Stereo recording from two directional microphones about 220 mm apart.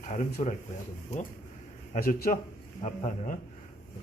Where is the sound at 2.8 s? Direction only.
30° left (ahead or behind).